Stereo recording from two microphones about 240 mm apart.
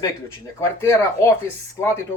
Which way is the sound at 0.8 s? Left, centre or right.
Centre.